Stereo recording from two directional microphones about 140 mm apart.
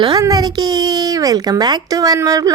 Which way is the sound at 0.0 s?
30° right (ahead or behind).